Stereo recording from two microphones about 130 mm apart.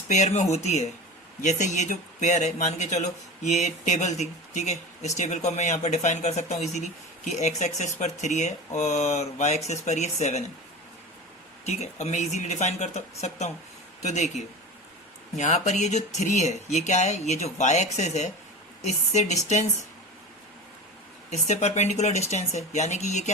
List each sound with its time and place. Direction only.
0.1 s speech: 60° left (ahead or behind)
1.4 s speech: 70° left (ahead or behind)
11.6 s speech: 55° left (ahead or behind)
14.0 s speech: 65° left (ahead or behind)
21.2 s speech: 60° left (ahead or behind)